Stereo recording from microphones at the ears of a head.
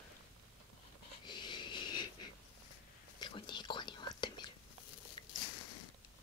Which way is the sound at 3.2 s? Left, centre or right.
Left.